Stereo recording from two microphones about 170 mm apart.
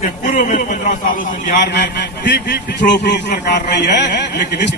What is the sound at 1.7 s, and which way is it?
A man's voice, 80° left.